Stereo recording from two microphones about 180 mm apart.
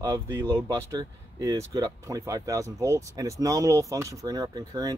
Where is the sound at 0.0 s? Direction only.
20° right (ahead or behind).